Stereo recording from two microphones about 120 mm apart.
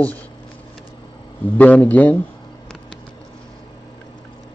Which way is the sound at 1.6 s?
15° left (ahead or behind).